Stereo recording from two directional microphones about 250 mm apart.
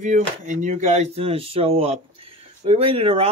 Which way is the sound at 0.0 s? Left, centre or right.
Right.